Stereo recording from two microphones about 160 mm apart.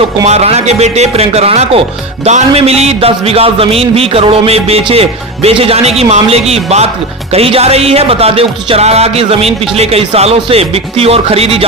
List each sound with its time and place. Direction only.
0.3 s a man's voice: 40° right (ahead or behind)